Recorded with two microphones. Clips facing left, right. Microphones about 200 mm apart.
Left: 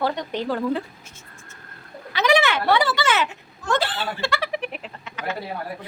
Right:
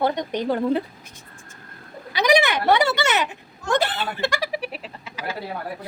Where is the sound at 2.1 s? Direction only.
15° right (ahead or behind).